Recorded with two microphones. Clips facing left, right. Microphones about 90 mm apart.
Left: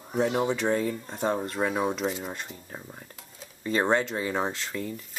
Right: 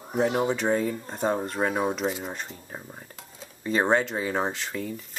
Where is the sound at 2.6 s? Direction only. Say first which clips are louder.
Right 1 dB; 15° right (ahead or behind).